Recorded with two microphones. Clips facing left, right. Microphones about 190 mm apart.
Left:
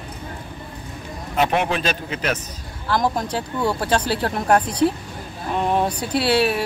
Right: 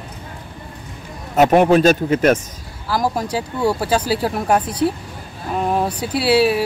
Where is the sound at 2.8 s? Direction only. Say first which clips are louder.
Right 1 dB; 10° right (ahead or behind).